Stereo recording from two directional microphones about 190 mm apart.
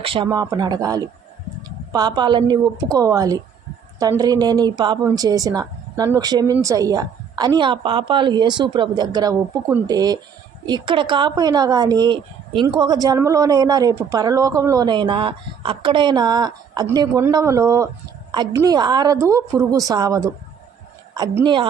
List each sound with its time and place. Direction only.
0.0 s speech: 25° right (ahead or behind)